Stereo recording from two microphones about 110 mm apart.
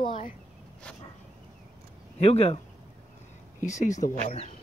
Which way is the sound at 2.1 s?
70° left (ahead or behind).